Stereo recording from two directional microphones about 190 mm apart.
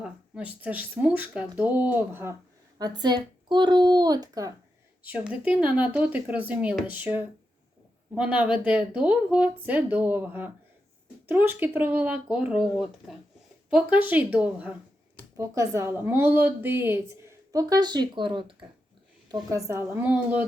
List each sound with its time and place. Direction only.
0.0 s a woman's voice: 5° right (ahead or behind)
5.0 s a woman's voice: 10° right (ahead or behind)